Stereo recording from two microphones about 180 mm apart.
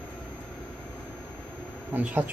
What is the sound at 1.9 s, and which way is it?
Speech, 10° right (ahead or behind).